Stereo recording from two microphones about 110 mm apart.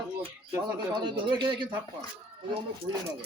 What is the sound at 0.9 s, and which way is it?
Speech, 50° right (ahead or behind).